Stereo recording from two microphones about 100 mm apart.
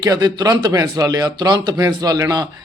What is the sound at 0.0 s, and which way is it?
Speech, 40° right (ahead or behind).